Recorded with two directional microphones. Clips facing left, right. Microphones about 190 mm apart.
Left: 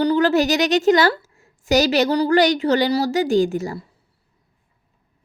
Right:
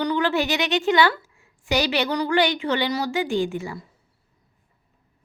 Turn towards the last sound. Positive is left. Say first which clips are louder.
# left 6 dB
turn(degrees=40)  # may be behind; listen again after turning